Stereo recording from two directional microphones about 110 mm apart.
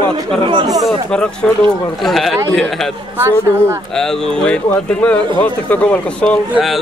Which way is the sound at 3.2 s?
25° right (ahead or behind).